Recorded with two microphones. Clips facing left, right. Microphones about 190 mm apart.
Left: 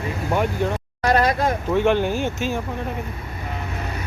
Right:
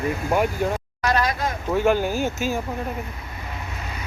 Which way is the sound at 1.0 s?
30° left (ahead or behind).